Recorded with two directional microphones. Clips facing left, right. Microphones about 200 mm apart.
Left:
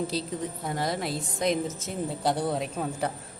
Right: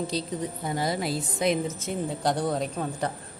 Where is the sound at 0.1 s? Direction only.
Centre (ahead or behind).